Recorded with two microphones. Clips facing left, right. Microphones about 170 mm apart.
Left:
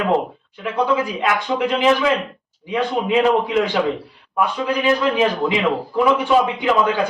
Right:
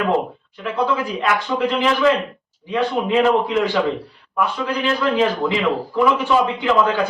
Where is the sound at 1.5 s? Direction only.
15° left (ahead or behind).